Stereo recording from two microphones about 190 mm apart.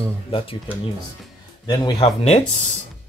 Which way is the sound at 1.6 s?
20° left (ahead or behind).